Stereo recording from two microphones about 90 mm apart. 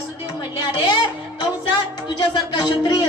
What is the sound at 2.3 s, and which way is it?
Speech, 60° left (ahead or behind).